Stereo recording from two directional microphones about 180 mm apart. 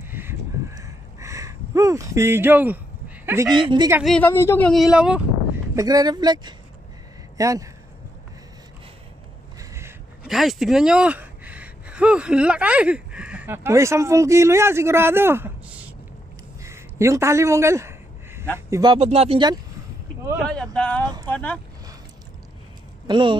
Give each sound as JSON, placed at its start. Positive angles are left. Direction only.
{"t": 0.1, "sound": "a sound", "side_deg": -10}
{"t": 3.3, "sound": "speech", "side_deg": -20}
{"t": 4.0, "sound": "speech", "side_deg": 5}
{"t": 4.3, "sound": "speech", "side_deg": 15}
{"t": 5.8, "sound": "speech", "side_deg": -20}
{"t": 9.6, "sound": "a sound", "side_deg": -15}
{"t": 10.2, "sound": "speech", "side_deg": 0}
{"t": 16.6, "sound": "a sound", "side_deg": -15}
{"t": 18.7, "sound": "speech", "side_deg": -20}
{"t": 18.9, "sound": "speech", "side_deg": -35}
{"t": 20.4, "sound": "speech", "side_deg": 5}
{"t": 21.0, "sound": "speech", "side_deg": -25}
{"t": 21.3, "sound": "speech", "side_deg": 10}
{"t": 23.0, "sound": "speech", "side_deg": -25}